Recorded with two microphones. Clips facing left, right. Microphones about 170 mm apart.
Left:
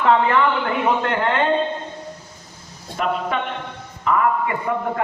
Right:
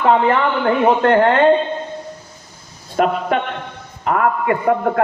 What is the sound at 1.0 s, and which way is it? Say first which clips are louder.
Speech: right 8 dB; 45° right (ahead or behind).